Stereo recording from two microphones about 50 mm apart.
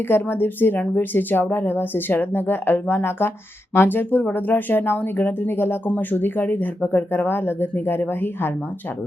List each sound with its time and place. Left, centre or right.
0.1 s a woman's voice: left